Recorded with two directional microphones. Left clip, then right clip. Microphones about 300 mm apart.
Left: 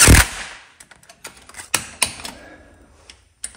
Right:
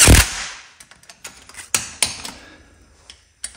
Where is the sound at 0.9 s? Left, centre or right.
Centre.